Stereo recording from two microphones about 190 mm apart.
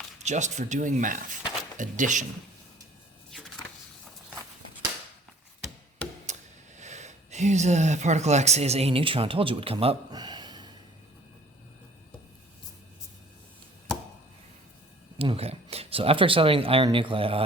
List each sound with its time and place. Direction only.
0.2 s speech: 40° right (ahead or behind)
6.2 s speech: 40° right (ahead or behind); by 10.7 s 20° right (ahead or behind)
15.2 s speech: 30° right (ahead or behind)